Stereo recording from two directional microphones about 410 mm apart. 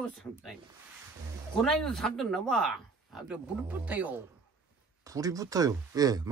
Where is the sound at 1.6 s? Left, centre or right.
Centre.